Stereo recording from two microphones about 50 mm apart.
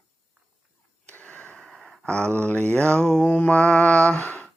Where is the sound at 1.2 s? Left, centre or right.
Left.